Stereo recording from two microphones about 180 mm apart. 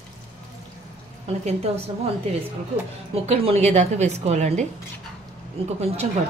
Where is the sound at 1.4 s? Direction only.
35° right (ahead or behind).